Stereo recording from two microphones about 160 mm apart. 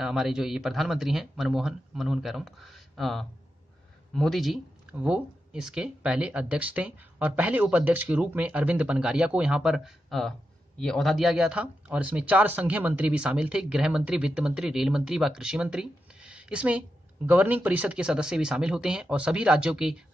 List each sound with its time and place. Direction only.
0.0 s speech: 5° right (ahead or behind)